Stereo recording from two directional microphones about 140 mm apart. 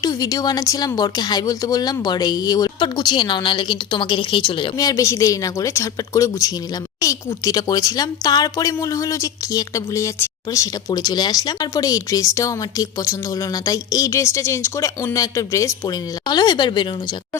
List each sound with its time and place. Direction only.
0.0 s speech: 25° left (ahead or behind)
4.8 s speech: 25° left (ahead or behind)